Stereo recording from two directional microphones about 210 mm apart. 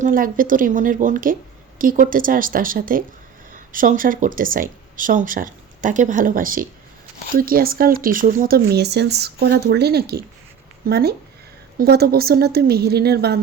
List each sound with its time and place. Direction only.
0.0 s speech: 40° right (ahead or behind)